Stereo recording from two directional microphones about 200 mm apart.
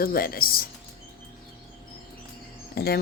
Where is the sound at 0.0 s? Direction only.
50° left (ahead or behind).